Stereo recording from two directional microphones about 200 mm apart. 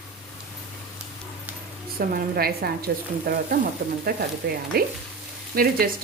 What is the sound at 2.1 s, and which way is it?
A woman's voice, 50° right (ahead or behind).